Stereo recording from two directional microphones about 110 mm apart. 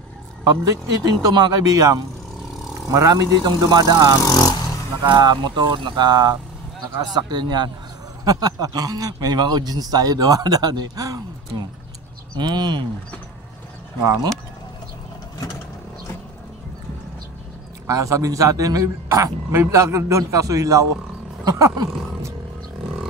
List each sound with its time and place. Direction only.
0.9 s speech: 40° right (ahead or behind)
4.3 s speech: 35° left (ahead or behind)
5.0 s speech: 40° right (ahead or behind)
12.4 s speech: 40° right (ahead or behind)
17.8 s a man's voice: 30° right (ahead or behind)
21.5 s a sound: 35° right (ahead or behind)